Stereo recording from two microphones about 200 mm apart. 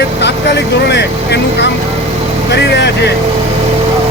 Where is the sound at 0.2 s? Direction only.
60° left (ahead or behind).